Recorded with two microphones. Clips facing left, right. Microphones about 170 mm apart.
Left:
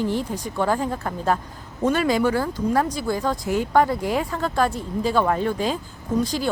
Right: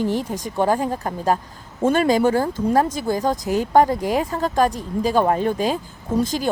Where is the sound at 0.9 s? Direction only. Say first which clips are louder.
Right 2 dB; 35° right (ahead or behind).